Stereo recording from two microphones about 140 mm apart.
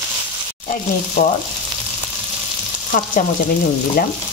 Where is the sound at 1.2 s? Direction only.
75° left (ahead or behind).